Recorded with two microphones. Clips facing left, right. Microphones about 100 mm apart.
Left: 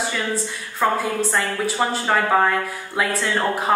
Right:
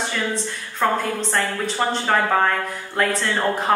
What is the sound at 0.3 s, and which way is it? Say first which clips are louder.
A woman's voice: left 1 dB; 5° left (ahead or behind).